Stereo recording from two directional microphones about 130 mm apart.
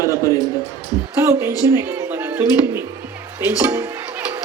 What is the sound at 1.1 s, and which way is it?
Speech, 20° right (ahead or behind).